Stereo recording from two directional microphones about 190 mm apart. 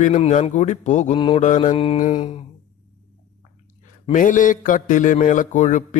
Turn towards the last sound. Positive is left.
turn(degrees=40)  # may be behind; listen again after turning